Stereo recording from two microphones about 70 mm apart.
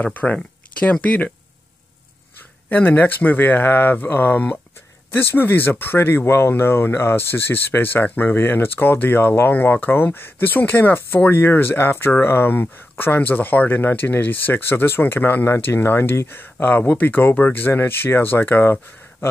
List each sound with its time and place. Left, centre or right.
0.0 s speech: left
2.7 s speech: left